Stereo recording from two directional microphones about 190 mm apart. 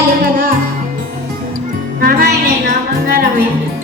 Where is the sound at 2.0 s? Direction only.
50° right (ahead or behind).